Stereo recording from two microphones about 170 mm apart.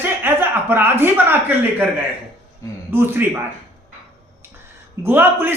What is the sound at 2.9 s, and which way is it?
Speech, 15° right (ahead or behind).